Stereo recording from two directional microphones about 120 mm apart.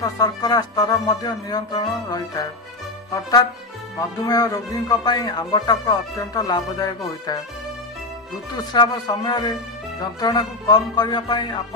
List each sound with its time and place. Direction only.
0.0 s speech: 30° left (ahead or behind)
8.7 s speech: 35° left (ahead or behind)